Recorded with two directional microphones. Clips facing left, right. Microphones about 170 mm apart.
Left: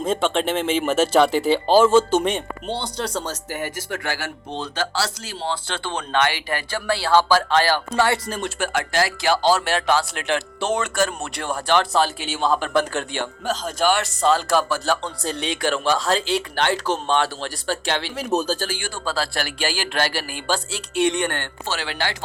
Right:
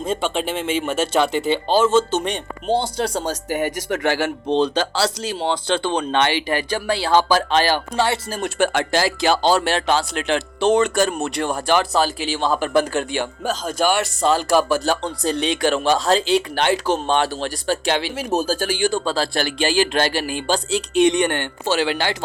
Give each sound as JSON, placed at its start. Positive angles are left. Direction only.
{"t": 0.0, "sound": "speech", "side_deg": 0}
{"t": 3.2, "sound": "speech", "side_deg": -15}
{"t": 4.4, "sound": "speech", "side_deg": -80}
{"t": 4.7, "sound": "speech", "side_deg": -20}
{"t": 11.7, "sound": "speech", "side_deg": -5}